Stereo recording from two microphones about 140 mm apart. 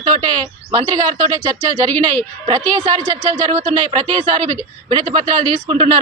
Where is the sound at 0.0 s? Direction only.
30° right (ahead or behind).